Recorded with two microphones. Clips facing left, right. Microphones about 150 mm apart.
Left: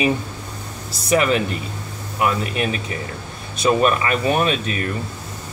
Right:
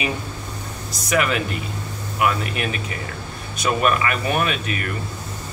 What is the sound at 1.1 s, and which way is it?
Speech, 30° left (ahead or behind).